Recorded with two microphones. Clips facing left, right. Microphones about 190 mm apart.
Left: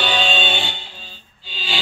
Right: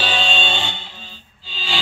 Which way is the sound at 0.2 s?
25° right (ahead or behind).